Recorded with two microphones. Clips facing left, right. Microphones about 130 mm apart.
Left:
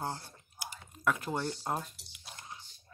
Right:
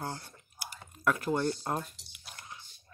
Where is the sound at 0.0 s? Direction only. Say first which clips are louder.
Left 1 dB; 20° left (ahead or behind).